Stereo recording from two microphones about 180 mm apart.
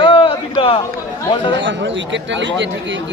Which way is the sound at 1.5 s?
90° right.